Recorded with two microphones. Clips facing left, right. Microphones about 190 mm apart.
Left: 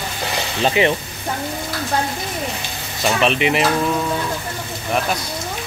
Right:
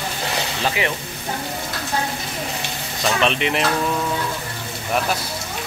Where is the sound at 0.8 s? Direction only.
25° left (ahead or behind).